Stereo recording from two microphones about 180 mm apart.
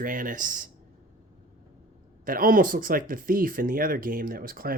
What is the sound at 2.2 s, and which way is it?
Speech, 50° right (ahead or behind).